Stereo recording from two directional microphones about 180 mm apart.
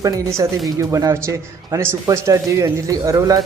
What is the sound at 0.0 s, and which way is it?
A man's voice, 15° right (ahead or behind).